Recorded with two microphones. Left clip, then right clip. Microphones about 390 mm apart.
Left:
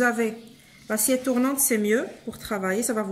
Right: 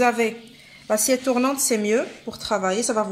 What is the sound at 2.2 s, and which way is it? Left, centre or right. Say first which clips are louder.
Speech: right 5 dB; right.